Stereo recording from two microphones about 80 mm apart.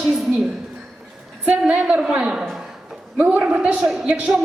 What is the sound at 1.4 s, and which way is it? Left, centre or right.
A woman's voice, centre.